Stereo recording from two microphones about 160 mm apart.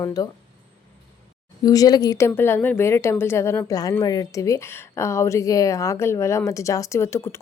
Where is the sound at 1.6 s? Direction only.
25° left (ahead or behind).